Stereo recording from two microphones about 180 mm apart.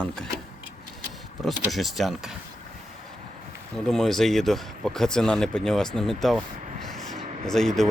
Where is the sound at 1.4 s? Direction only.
Centre (ahead or behind).